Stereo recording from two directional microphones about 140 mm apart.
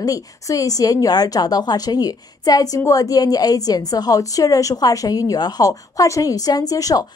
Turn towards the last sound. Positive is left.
turn(degrees=25)  # may be behind; listen again after turning